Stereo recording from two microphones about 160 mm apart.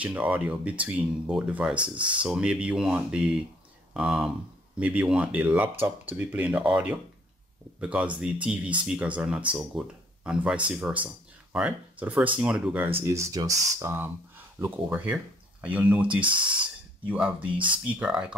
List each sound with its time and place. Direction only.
0.0 s speech: 10° right (ahead or behind)
1.8 s speech: 30° right (ahead or behind)
2.2 s speech: 5° right (ahead or behind)
16.2 s speech: 30° right (ahead or behind)
17.0 s speech: 10° right (ahead or behind)
17.5 s speech: 30° right (ahead or behind)
17.9 s speech: 5° right (ahead or behind)